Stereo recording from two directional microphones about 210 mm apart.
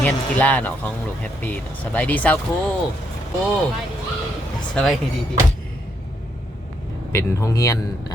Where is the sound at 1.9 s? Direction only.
5° left (ahead or behind).